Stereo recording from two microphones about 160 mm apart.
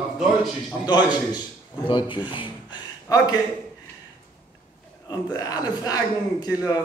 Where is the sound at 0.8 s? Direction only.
25° left (ahead or behind).